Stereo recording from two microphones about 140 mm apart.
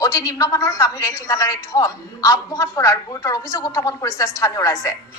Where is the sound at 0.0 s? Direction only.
25° left (ahead or behind).